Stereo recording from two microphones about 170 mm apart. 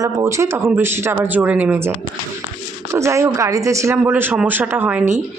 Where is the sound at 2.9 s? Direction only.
15° right (ahead or behind).